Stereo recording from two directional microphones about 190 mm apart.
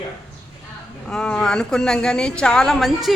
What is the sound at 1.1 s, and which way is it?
Speech, 5° left (ahead or behind).